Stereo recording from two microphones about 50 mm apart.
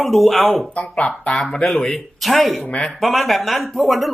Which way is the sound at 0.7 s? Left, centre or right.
Left.